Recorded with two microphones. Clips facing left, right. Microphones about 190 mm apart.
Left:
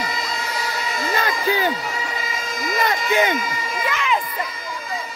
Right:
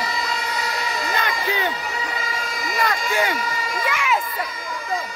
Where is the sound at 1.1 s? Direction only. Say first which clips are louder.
Left 5 dB; 35° left (ahead or behind).